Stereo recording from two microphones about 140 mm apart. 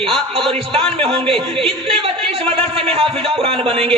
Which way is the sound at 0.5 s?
45° right (ahead or behind).